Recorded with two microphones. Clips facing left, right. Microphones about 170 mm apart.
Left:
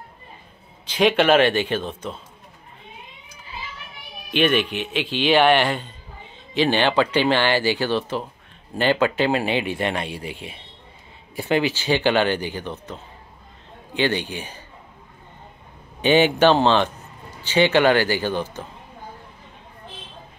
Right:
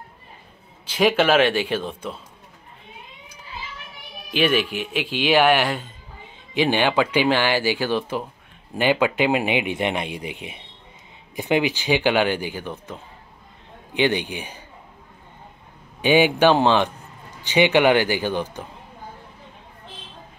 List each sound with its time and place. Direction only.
0.8 s speech: 5° right (ahead or behind)
4.3 s speech: 5° right (ahead or behind)
16.0 s speech: 10° right (ahead or behind)